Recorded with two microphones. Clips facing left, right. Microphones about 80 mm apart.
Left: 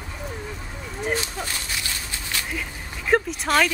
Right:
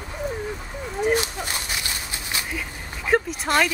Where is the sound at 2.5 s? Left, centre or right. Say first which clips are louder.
Even; centre.